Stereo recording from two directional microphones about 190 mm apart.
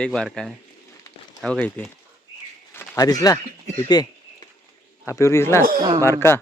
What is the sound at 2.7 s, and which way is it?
Speech, 15° left (ahead or behind).